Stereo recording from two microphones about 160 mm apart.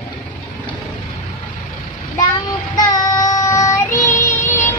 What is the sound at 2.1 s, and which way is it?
Child singing, 25° left (ahead or behind).